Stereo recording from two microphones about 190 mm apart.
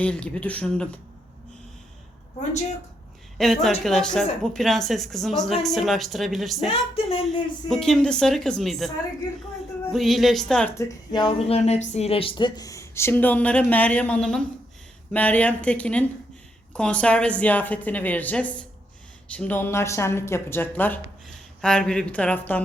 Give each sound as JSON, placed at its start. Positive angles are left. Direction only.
{"t": 0.0, "sound": "speech", "side_deg": 5}
{"t": 3.3, "sound": "a woman's voice", "side_deg": 0}
{"t": 6.7, "sound": "speech", "side_deg": 30}
{"t": 7.7, "sound": "a woman's voice", "side_deg": 5}
{"t": 9.9, "sound": "a woman's voice", "side_deg": 0}